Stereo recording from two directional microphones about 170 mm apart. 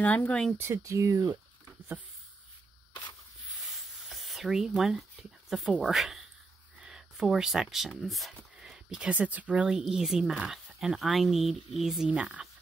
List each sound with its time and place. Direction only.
0.0 s speech: 10° left (ahead or behind)
0.6 s speech: 15° right (ahead or behind)
3.4 s a sound: centre (ahead or behind)
5.5 s speech: centre (ahead or behind)